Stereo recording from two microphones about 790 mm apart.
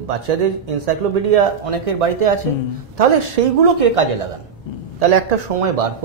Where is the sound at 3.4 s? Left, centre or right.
Right.